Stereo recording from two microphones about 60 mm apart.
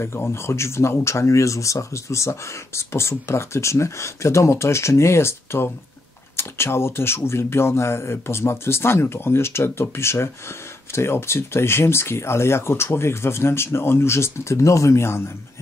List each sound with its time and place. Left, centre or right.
0.0 s speech: left